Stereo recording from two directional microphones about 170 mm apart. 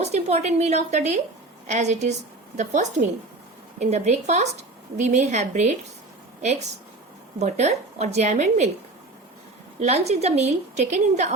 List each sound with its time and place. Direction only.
0.0 s a woman's voice: 40° right (ahead or behind)
9.8 s a woman's voice: 40° right (ahead or behind)